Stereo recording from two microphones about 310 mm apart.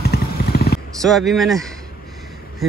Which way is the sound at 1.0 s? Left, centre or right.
Centre.